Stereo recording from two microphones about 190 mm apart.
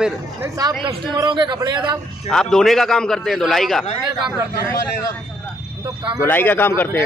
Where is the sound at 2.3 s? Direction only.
Centre (ahead or behind).